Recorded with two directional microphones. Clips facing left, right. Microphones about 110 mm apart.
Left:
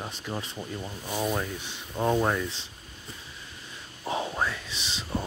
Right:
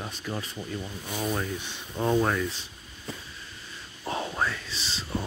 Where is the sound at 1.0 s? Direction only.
35° left (ahead or behind).